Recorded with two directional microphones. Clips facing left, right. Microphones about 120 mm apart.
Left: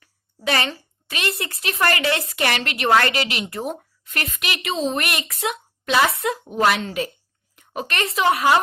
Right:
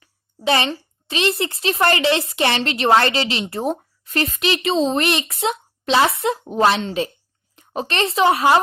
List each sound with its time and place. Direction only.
0.0 s a woman's voice: 25° right (ahead or behind)